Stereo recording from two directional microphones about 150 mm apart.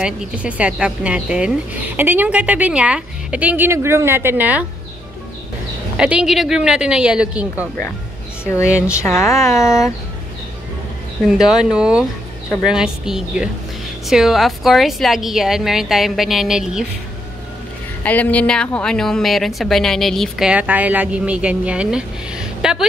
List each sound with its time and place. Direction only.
0.0 s a woman's voice: 5° right (ahead or behind)
5.9 s a woman's voice: 5° right (ahead or behind)
8.9 s speech: 20° left (ahead or behind)
11.2 s a woman's voice: 5° right (ahead or behind)
18.0 s a woman's voice: 10° left (ahead or behind)